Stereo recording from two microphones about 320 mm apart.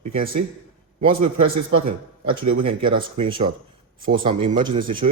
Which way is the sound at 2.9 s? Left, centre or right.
Centre.